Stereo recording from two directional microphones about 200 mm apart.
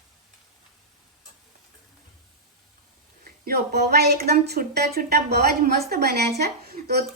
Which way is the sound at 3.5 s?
55° right (ahead or behind).